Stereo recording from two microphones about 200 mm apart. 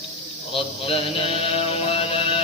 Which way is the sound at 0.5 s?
25° left (ahead or behind).